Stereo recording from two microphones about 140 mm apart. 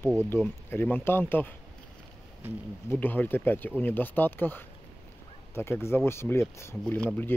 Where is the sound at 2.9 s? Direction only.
15° left (ahead or behind).